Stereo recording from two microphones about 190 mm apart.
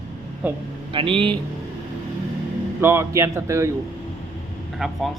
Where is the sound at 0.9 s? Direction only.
30° right (ahead or behind).